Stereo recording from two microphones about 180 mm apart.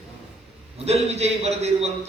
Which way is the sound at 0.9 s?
35° right (ahead or behind).